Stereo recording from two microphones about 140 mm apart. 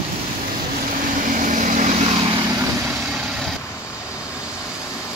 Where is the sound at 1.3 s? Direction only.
65° right (ahead or behind).